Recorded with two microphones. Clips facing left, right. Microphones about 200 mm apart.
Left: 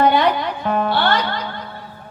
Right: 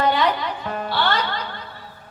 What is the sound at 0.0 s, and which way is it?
Music, 55° left (ahead or behind).